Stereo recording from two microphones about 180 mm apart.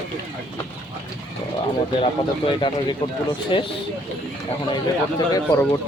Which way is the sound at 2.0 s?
30° left (ahead or behind).